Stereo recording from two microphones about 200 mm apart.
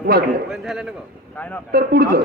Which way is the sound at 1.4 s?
10° left (ahead or behind).